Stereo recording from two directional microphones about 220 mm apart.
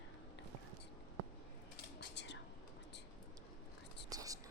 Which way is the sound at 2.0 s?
50° left (ahead or behind).